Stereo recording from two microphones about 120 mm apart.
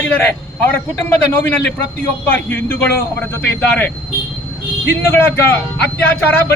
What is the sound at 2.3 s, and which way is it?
Speech, 15° left (ahead or behind).